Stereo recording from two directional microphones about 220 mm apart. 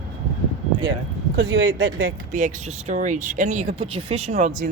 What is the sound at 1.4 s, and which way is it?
Speech, 60° right (ahead or behind).